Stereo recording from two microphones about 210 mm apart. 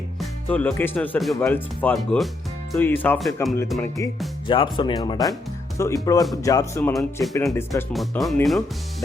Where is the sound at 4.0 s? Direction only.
15° left (ahead or behind).